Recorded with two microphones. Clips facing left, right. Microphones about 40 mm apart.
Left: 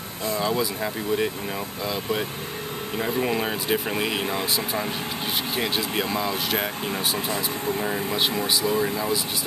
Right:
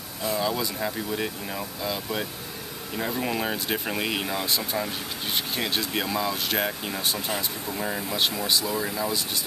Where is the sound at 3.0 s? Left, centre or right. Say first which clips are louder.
Left 3 dB; centre.